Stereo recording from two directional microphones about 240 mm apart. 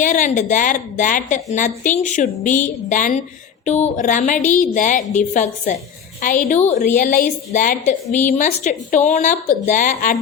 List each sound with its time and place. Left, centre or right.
0.0 s a woman's voice: left
8.0 s a woman's voice: centre
8.3 s a woman's voice: left